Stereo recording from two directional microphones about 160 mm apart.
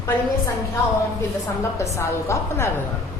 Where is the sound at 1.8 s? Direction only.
20° left (ahead or behind).